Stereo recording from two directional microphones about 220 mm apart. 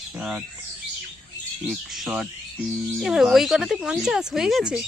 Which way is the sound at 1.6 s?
Centre (ahead or behind).